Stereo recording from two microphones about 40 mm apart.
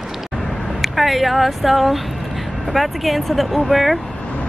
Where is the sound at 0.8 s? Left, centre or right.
Centre.